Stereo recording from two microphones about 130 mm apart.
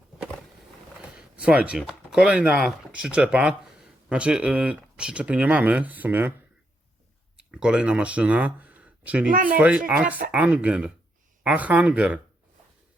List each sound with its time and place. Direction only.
1.1 s speech: 10° right (ahead or behind)
7.5 s speech: 5° right (ahead or behind)
9.3 s speech: 90° right
9.6 s speech: 10° right (ahead or behind)